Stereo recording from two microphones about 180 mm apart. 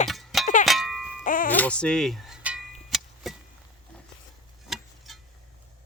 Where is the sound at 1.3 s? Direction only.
50° left (ahead or behind).